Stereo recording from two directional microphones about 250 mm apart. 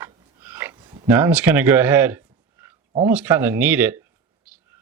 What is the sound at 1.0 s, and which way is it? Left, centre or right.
Speech, centre.